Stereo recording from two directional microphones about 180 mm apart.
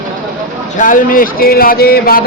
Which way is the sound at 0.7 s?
45° left (ahead or behind).